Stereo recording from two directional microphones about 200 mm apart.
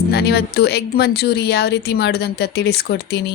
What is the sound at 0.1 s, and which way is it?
A woman's voice, 55° left (ahead or behind).